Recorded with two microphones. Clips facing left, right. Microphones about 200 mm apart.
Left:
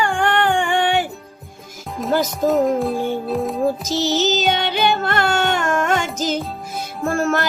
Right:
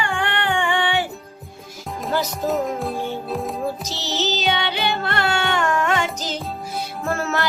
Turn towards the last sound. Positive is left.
turn(degrees=50)  # may be behind; listen again after turning